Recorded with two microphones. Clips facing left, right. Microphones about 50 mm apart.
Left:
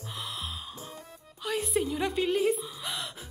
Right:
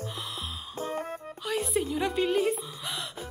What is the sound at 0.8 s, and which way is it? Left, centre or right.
Music, right.